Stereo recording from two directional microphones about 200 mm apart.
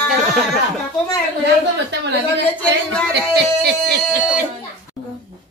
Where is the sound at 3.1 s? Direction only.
55° right (ahead or behind).